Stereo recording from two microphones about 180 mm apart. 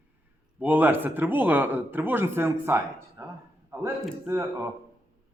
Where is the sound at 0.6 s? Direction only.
10° right (ahead or behind).